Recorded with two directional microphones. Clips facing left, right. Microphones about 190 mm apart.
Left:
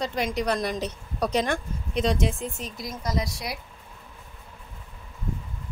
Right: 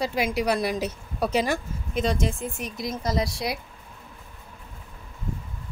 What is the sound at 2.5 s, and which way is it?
A woman's voice, 15° right (ahead or behind).